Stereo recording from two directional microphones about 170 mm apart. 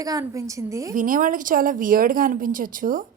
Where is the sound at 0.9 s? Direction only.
50° right (ahead or behind).